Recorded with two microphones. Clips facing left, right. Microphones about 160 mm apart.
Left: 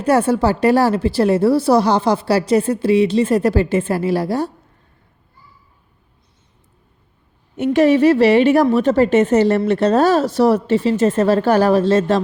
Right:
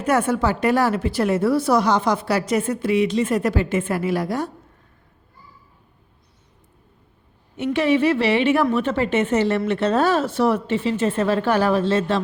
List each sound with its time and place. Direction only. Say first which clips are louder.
0.0 s a woman's voice: left 5 dB; 30° left (ahead or behind)
7.5 s a woman's voice: left 6 dB; 45° left (ahead or behind)